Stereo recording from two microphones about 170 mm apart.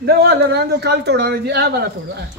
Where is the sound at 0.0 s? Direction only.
70° right (ahead or behind).